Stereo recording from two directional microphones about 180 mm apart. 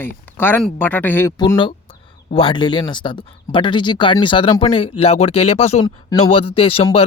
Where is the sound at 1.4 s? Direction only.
25° left (ahead or behind).